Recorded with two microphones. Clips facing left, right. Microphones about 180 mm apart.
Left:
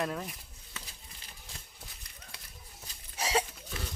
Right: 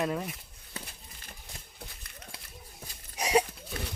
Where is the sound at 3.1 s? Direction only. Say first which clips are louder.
Right 5 dB; 15° right (ahead or behind).